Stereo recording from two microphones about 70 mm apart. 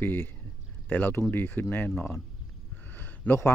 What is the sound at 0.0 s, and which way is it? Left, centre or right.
Speech, left.